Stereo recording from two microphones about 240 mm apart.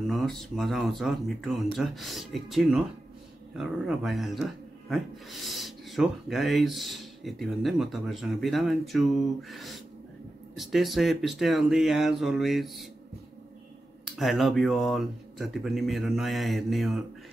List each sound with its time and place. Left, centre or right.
0.0 s speech: centre
14.1 s speech: centre